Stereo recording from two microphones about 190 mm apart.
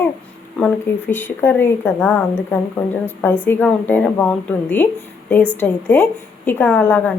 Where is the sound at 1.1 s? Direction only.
10° left (ahead or behind).